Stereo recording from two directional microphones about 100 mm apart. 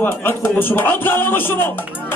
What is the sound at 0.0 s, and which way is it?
A man's voice, 25° left (ahead or behind).